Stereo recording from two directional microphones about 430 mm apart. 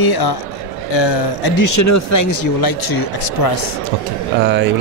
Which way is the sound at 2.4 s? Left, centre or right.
Left.